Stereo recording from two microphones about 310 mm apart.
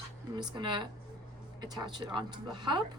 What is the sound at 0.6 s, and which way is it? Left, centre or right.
A woman's voice, centre.